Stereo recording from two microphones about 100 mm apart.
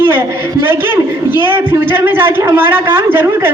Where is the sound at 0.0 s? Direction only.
20° right (ahead or behind).